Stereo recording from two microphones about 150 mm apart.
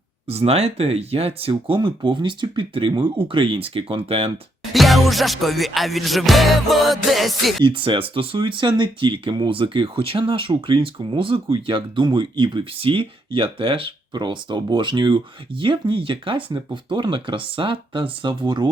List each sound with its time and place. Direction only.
0.3 s speech: 45° right (ahead or behind)
4.7 s music: centre (ahead or behind)
7.6 s speech: 35° right (ahead or behind)